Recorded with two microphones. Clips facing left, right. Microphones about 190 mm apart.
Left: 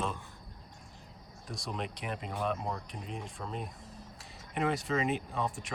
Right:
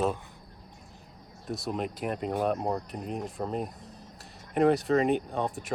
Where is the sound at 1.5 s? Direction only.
5° right (ahead or behind).